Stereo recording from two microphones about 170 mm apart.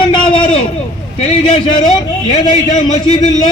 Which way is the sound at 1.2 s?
40° left (ahead or behind).